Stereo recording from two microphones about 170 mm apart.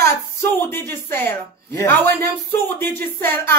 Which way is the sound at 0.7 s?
15° left (ahead or behind).